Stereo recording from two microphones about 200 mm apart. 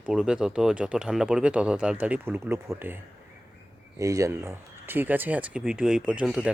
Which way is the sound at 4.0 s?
15° right (ahead or behind).